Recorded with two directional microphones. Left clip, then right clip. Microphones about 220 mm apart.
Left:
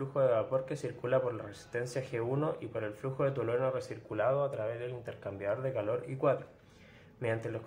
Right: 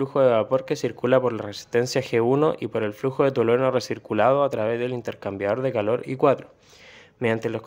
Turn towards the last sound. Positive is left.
turn(degrees=-45)  # may be behind; listen again after turning